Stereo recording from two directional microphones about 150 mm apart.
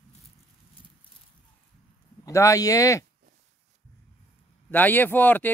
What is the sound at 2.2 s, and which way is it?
Speech, 20° left (ahead or behind).